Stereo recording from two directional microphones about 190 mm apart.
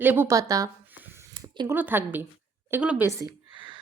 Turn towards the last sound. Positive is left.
turn(degrees=-15)  # may be behind; listen again after turning